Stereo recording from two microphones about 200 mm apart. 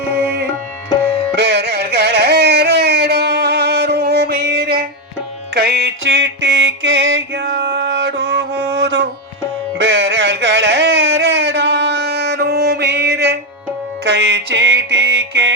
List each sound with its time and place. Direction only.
1.4 s music: 55° right (ahead or behind)